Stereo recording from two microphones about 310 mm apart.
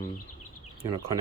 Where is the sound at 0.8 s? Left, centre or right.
Centre.